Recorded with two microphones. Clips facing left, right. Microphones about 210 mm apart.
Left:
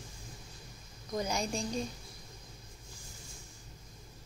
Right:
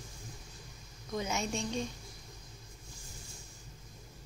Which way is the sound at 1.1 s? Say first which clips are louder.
Left 1 dB; centre (ahead or behind).